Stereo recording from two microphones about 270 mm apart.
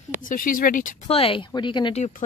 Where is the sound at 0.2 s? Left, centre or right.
Left.